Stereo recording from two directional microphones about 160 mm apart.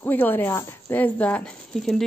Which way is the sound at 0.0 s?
10° left (ahead or behind).